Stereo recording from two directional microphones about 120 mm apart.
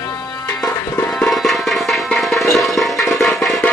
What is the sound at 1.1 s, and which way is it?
Music, centre (ahead or behind).